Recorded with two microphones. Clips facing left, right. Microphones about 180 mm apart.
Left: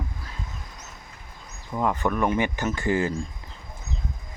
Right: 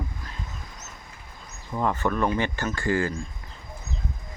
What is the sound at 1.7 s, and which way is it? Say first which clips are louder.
Speech: left 1 dB; 5° left (ahead or behind).